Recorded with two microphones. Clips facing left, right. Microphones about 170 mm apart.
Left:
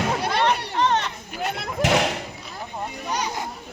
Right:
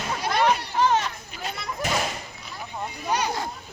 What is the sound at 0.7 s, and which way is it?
Chatter, 5° right (ahead or behind).